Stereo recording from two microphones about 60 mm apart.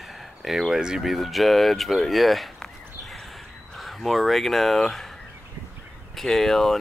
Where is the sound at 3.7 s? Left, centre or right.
Centre.